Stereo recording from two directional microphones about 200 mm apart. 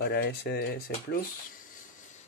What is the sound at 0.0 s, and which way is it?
Speech, 55° left (ahead or behind).